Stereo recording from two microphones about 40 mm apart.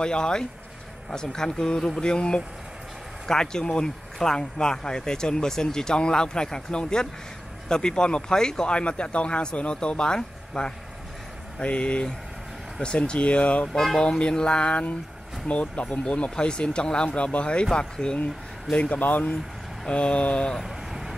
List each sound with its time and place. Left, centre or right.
0.0 s speech: left
13.7 s speech: centre
14.0 s speech: left
18.7 s speech: left
19.9 s speech: left
20.5 s vehicle: centre